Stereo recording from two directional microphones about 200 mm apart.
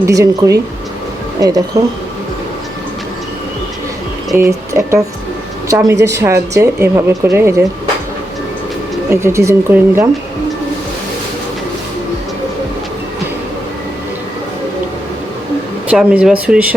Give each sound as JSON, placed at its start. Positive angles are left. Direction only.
{"t": 0.0, "sound": "speech", "side_deg": -15}
{"t": 4.4, "sound": "a woman's voice", "side_deg": -15}
{"t": 9.0, "sound": "speech", "side_deg": -15}
{"t": 15.9, "sound": "speech", "side_deg": -5}